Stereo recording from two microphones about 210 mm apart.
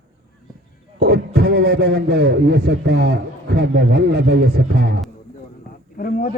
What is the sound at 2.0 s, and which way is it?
A man's voice, 50° right (ahead or behind).